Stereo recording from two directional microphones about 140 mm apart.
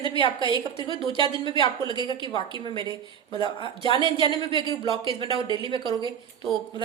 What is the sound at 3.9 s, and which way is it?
A woman's voice, 35° right (ahead or behind).